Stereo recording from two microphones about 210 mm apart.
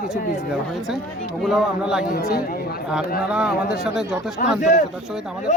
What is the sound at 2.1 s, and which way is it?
Speech, 45° left (ahead or behind).